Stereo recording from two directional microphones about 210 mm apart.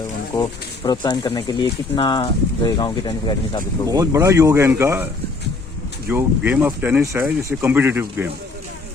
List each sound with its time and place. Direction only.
0.9 s speech: 20° left (ahead or behind)
3.8 s speech: 15° right (ahead or behind)
6.1 s speech: 10° right (ahead or behind)